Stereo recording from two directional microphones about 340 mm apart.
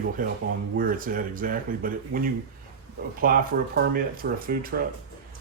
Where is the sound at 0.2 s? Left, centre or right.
Right.